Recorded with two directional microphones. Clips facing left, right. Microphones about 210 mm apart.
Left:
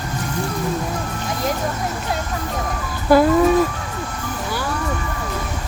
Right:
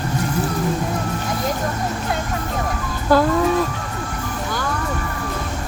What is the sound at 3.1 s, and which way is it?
Chicken, 10° left (ahead or behind).